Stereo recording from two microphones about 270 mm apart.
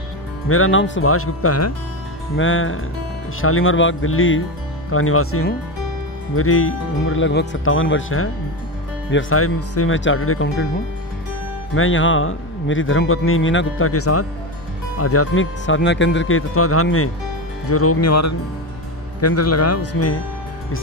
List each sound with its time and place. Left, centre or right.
0.5 s speech: left
2.3 s speech: left
11.7 s speech: left